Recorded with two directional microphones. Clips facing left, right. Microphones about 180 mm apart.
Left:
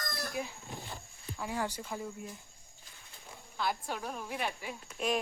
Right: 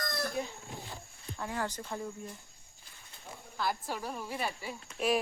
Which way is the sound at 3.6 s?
Centre (ahead or behind).